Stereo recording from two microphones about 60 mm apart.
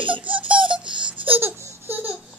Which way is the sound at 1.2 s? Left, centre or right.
Right.